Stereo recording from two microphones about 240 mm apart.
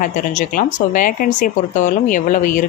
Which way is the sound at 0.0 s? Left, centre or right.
Left.